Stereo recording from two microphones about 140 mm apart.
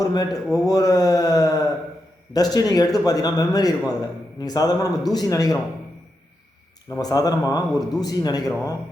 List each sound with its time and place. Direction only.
0.0 s speech: 25° left (ahead or behind)
7.0 s speech: 25° left (ahead or behind)